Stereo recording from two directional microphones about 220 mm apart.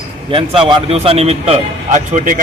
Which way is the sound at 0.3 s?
25° right (ahead or behind).